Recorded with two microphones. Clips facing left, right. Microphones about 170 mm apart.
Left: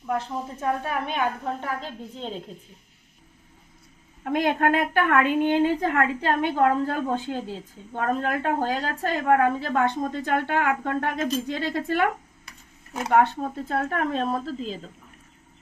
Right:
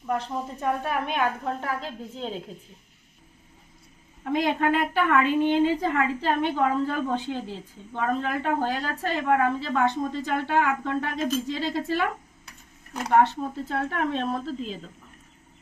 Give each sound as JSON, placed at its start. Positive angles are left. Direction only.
{"t": 0.0, "sound": "a woman's voice", "side_deg": 0}
{"t": 4.2, "sound": "a woman's voice", "side_deg": 55}
{"t": 13.1, "sound": "a woman's voice", "side_deg": 55}